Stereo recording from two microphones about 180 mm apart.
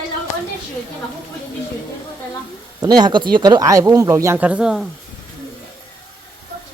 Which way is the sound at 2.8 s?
20° right (ahead or behind).